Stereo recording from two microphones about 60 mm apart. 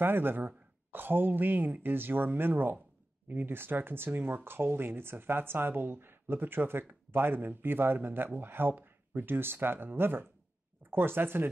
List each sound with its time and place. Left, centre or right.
0.0 s speech: right